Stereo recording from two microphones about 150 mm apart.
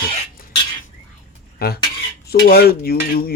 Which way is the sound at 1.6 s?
90° left.